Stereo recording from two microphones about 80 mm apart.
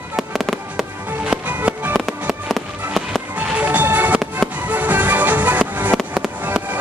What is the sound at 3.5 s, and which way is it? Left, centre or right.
Music, right.